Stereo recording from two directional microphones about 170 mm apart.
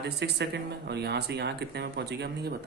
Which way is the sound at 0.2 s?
90° right.